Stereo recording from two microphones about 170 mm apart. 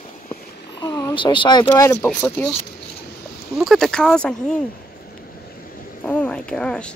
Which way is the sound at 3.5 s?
Centre (ahead or behind).